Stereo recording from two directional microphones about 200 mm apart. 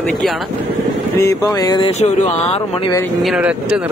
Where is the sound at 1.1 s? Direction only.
15° left (ahead or behind).